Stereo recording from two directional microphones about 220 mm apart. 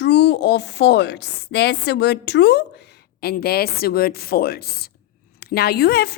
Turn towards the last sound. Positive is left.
turn(degrees=45)  # may be behind; listen again after turning